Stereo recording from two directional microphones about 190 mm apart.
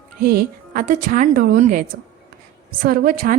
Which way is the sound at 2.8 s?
50° right (ahead or behind).